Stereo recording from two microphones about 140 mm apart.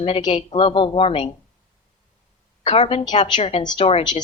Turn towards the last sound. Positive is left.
turn(degrees=40)  # may be behind; listen again after turning